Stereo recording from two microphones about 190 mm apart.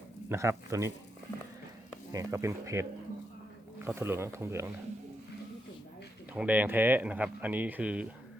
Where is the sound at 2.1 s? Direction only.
15° right (ahead or behind).